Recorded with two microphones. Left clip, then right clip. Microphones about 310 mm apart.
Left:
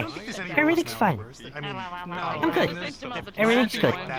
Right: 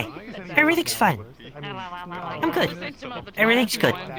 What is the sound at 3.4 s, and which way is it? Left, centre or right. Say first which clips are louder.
Speech: right 2 dB; centre.